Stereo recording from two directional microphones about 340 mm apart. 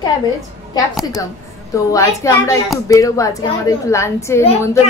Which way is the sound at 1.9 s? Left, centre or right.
Centre.